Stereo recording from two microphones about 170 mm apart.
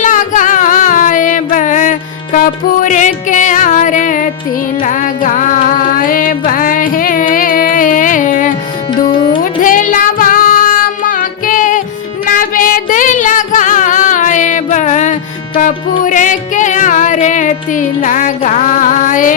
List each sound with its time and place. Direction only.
0.0 s music: 50° left (ahead or behind)
9.0 s music: 30° left (ahead or behind)
9.4 s child singing: 50° left (ahead or behind)
12.2 s music: 55° left (ahead or behind)